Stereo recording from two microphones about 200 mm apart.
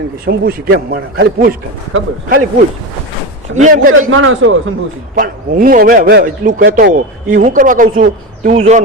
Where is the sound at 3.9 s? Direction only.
90° right.